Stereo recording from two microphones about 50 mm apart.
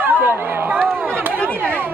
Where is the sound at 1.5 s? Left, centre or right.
Right.